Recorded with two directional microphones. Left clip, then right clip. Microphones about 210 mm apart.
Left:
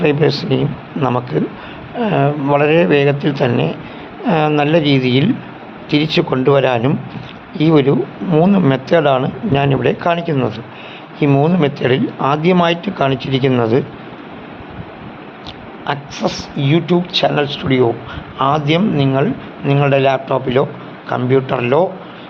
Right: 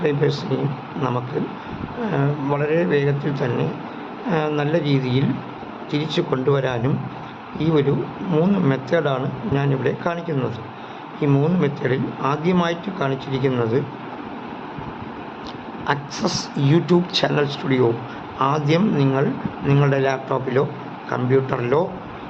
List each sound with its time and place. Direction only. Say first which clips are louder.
0.0 s speech: left 7 dB; 25° left (ahead or behind)
15.9 s a man's voice: left 3 dB; centre (ahead or behind); by 21.8 s 20° left (ahead or behind)